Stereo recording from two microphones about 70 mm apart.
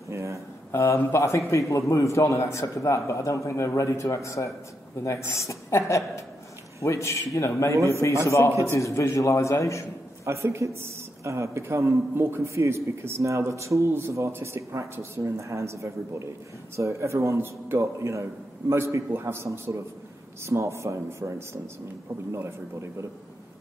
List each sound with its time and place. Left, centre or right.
0.1 s a sound: right
0.7 s a man's voice: left
7.7 s a man's voice: right
8.7 s a man's voice: left
10.2 s a man's voice: right